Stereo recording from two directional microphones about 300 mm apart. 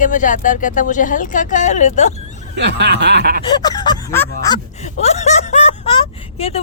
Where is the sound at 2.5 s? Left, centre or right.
Right.